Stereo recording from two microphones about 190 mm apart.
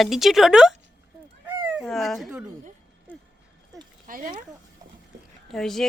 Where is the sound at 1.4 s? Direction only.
10° right (ahead or behind).